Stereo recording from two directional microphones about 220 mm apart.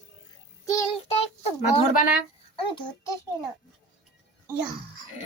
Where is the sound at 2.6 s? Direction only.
20° left (ahead or behind).